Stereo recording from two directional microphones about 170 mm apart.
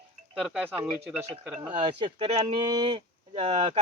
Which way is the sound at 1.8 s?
30° right (ahead or behind).